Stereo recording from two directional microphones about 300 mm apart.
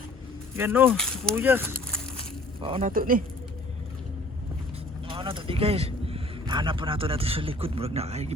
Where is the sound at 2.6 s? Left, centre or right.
Centre.